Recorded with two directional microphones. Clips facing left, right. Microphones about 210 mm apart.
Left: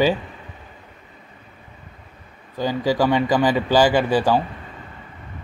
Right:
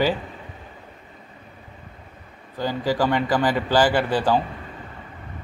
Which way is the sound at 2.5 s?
15° left (ahead or behind).